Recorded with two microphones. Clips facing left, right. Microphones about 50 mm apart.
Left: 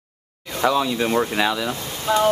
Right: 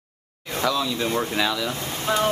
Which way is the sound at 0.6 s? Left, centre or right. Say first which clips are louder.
Left 4 dB; left.